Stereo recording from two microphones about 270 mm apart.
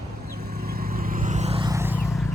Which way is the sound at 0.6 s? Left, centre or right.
Right.